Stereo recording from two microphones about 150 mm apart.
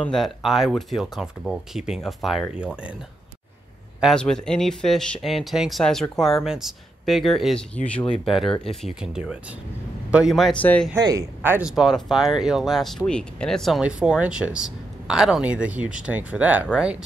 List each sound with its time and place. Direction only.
0.0 s speech: centre (ahead or behind)
4.0 s speech: 5° left (ahead or behind)
8.6 s speech: 5° right (ahead or behind)
10.6 s speech: 10° left (ahead or behind)
11.0 s speech: 25° right (ahead or behind)
11.4 s speech: 15° right (ahead or behind)
11.7 s speech: centre (ahead or behind)